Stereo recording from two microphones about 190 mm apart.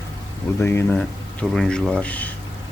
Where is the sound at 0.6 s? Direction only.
10° left (ahead or behind).